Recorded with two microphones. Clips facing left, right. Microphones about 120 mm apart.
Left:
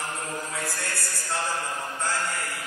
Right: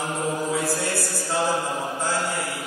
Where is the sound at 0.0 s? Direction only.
Centre (ahead or behind).